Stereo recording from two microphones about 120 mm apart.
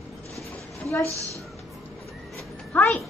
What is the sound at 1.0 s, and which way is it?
Speech, 25° right (ahead or behind).